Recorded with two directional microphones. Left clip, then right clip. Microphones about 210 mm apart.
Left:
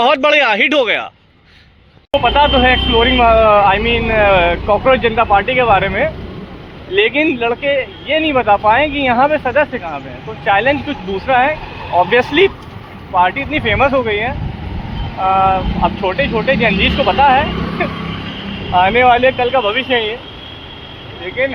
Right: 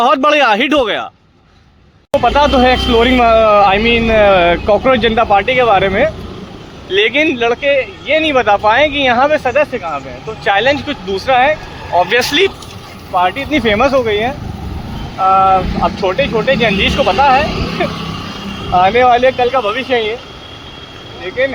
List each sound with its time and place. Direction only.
0.0 s speech: 30° right (ahead or behind)
2.2 s speech: 60° right (ahead or behind)